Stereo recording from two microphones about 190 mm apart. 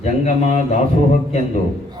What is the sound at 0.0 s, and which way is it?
Mantra, 35° left (ahead or behind).